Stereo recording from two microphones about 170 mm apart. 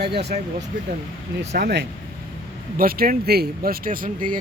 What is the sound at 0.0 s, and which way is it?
Speech, 70° right (ahead or behind).